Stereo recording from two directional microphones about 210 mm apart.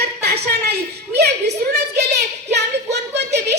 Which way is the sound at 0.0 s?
50° right (ahead or behind).